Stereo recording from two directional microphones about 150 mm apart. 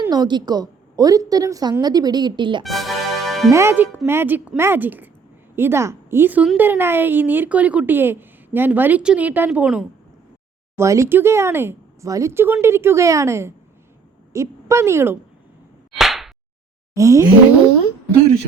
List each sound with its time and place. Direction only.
0.1 s a woman's voice: 30° right (ahead or behind)
2.6 s music: centre (ahead or behind)
3.5 s a woman's voice: 15° right (ahead or behind)
10.8 s a woman's voice: 20° right (ahead or behind)
16.0 s whip: centre (ahead or behind)
16.9 s a woman's voice: 20° right (ahead or behind)